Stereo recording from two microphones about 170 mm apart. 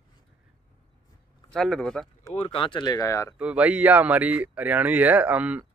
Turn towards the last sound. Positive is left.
turn(degrees=-10)  # may be behind; listen again after turning